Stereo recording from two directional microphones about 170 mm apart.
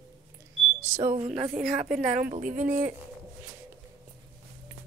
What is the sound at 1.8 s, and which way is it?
Speech, 45° right (ahead or behind).